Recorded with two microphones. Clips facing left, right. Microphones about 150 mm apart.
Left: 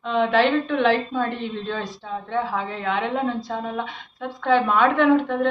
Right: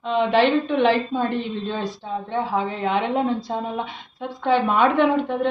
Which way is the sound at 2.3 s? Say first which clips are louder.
Right 1 dB; 20° right (ahead or behind).